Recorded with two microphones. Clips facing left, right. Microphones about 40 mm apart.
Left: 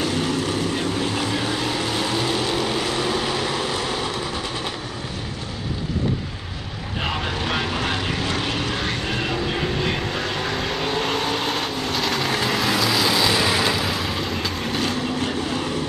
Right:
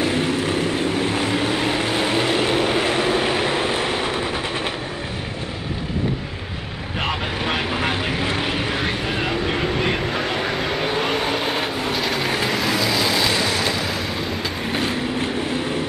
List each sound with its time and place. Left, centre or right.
0.0 s vehicle: right
7.4 s vehicle: right
10.3 s vehicle: centre
13.4 s vehicle: centre
14.7 s vehicle: right